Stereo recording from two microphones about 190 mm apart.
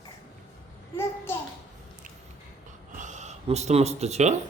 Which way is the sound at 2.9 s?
40° right (ahead or behind).